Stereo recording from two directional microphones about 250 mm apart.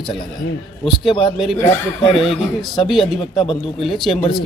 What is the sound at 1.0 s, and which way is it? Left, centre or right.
Speech, left.